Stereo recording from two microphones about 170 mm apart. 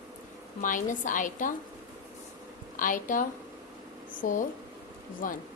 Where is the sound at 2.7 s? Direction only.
50° left (ahead or behind).